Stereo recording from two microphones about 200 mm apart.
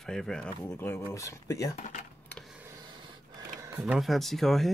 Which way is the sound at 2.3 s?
Centre (ahead or behind).